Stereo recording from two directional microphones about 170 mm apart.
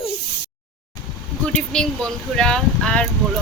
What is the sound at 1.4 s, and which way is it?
Speech, 5° left (ahead or behind).